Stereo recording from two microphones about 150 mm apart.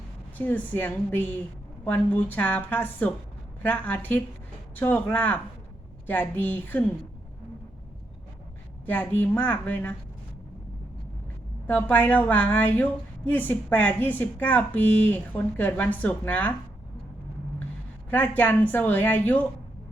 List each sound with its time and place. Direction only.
0.3 s a woman's voice: 10° left (ahead or behind)
8.9 s a woman's voice: 10° left (ahead or behind)
11.6 s a woman's voice: 10° left (ahead or behind)
18.1 s a woman's voice: 10° left (ahead or behind)